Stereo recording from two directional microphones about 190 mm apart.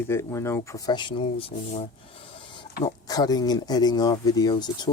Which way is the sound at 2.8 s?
20° left (ahead or behind).